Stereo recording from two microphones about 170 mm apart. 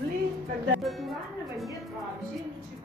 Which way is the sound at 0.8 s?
Centre (ahead or behind).